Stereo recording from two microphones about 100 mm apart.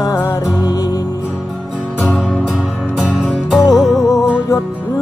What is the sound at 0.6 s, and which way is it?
Music, 40° left (ahead or behind).